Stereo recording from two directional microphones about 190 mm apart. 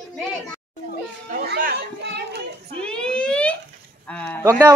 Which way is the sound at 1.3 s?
50° right (ahead or behind).